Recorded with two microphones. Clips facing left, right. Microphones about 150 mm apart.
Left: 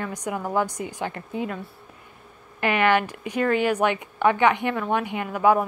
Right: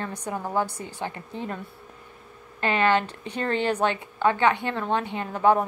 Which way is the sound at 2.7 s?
15° left (ahead or behind).